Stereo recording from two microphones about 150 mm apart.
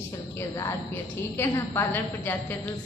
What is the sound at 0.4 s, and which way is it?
A woman's voice, 20° left (ahead or behind).